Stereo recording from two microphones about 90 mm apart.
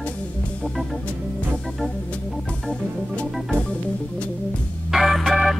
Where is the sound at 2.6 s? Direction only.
10° left (ahead or behind).